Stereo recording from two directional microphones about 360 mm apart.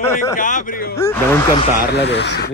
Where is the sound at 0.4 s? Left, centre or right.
Left.